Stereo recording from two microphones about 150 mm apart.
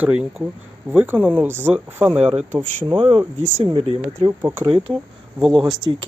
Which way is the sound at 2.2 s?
40° right (ahead or behind).